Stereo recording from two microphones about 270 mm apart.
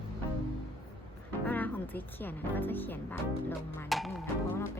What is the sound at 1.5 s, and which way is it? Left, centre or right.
Music, centre.